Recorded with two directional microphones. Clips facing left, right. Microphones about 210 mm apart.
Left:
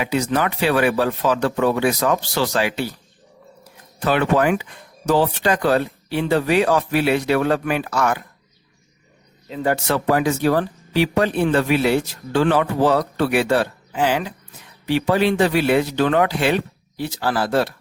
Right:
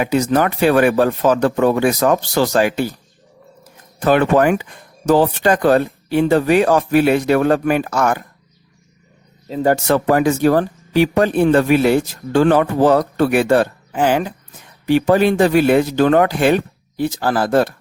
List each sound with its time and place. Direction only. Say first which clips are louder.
0.0 s speech: right 5 dB; 45° right (ahead or behind)
4.0 s speech: right 4 dB; 45° right (ahead or behind)
9.5 s speech: right 5 dB; 40° right (ahead or behind)